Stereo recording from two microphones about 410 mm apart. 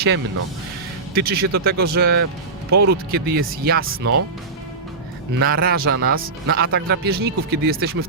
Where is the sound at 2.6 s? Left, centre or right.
Right.